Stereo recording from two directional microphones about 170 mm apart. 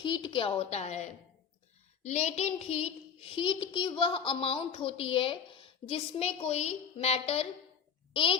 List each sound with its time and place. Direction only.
0.0 s a child's voice: 30° left (ahead or behind)